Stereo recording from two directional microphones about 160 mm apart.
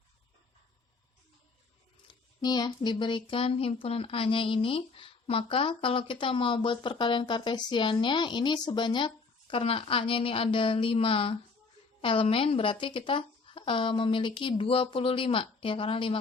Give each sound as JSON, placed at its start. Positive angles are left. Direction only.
{"t": 2.0, "sound": "speech", "side_deg": 25}